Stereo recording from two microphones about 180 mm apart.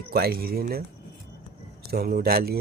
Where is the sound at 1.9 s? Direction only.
60° right (ahead or behind).